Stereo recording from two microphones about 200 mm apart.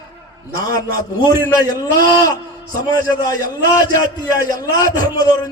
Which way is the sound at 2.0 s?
20° left (ahead or behind).